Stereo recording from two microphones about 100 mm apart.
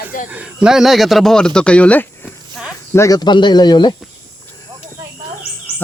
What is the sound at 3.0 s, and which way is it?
Speech, 45° left (ahead or behind).